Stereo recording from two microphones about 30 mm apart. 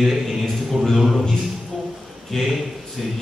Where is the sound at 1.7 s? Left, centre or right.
Centre.